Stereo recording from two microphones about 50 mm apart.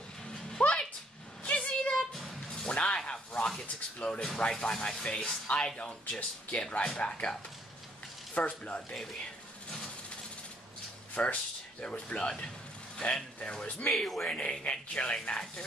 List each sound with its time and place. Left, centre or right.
0.3 s a sound: centre
2.5 s music: left
3.1 s snake: left
3.6 s a sound: left
4.4 s speech: centre
5.8 s speech: left
8.4 s speech: left
11.2 s speech: centre
11.8 s speech: left
13.9 s speech: centre
14.3 s speech: left